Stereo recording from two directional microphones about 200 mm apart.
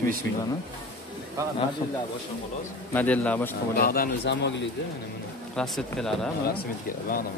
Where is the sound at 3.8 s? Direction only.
50° left (ahead or behind).